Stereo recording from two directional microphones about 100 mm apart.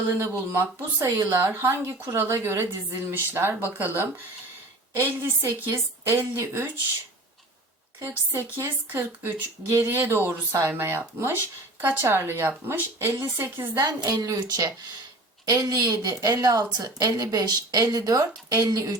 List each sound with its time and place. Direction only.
0.5 s speech: 30° right (ahead or behind)
8.0 s speech: 25° right (ahead or behind)
13.7 s a woman's voice: 40° right (ahead or behind)